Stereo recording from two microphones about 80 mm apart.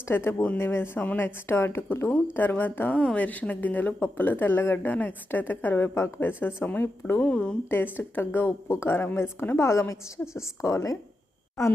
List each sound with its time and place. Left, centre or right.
0.1 s a woman's voice: left
7.3 s speech: centre
7.9 s a woman's voice: left